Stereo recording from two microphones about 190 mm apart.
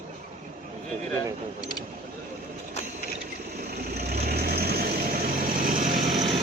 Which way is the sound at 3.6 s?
55° right (ahead or behind).